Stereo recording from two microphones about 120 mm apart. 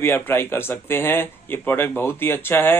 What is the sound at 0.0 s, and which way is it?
Speech, 20° left (ahead or behind).